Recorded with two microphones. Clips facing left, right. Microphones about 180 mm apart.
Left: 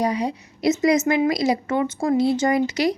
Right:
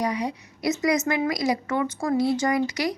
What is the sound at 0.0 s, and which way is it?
A woman's voice, 30° left (ahead or behind).